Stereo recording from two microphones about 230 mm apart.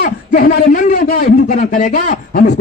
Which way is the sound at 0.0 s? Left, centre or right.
Left.